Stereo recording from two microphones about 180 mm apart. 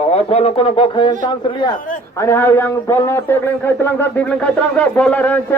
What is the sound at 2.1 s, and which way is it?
A man's voice, 15° left (ahead or behind).